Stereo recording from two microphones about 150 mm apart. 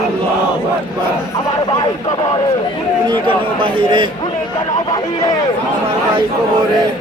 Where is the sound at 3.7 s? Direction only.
35° right (ahead or behind).